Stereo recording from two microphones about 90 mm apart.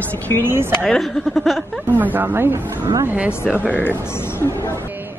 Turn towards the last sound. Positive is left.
turn(degrees=20)  # may be behind; listen again after turning